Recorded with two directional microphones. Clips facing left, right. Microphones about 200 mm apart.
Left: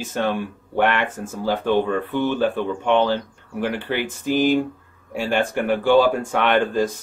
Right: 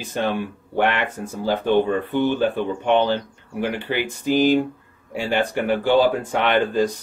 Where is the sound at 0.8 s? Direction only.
50° left (ahead or behind).